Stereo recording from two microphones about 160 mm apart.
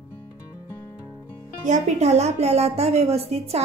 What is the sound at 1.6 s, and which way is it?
A woman's voice, 45° right (ahead or behind).